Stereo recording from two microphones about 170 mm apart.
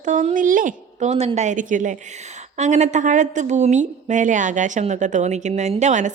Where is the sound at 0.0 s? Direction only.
45° right (ahead or behind).